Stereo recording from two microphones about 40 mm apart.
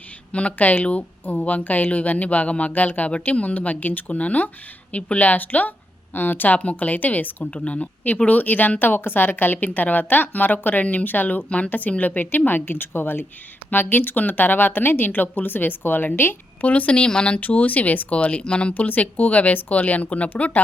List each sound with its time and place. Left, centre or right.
0.3 s speech: left
6.6 s speech: left
7.6 s speech: left
11.4 s speech: left
16.6 s speech: left
17.4 s speech: left
18.7 s speech: left